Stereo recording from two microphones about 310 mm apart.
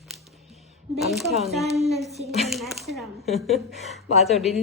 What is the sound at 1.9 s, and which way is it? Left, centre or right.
Speech, centre.